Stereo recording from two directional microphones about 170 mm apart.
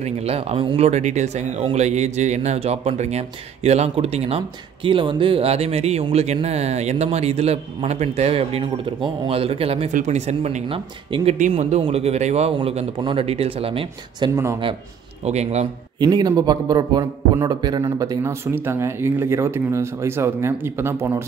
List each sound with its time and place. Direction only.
0.0 s speech: 35° right (ahead or behind)
11.3 s speech: 45° right (ahead or behind)
14.3 s a man's voice: 15° right (ahead or behind)
15.2 s speech: 40° right (ahead or behind)
16.0 s a man's voice: 25° right (ahead or behind)